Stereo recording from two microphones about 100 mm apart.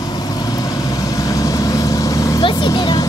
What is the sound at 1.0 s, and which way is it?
Vehicle, 35° left (ahead or behind).